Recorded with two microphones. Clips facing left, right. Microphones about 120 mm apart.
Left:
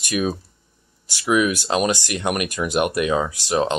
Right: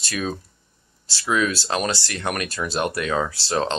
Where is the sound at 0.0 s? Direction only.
15° left (ahead or behind).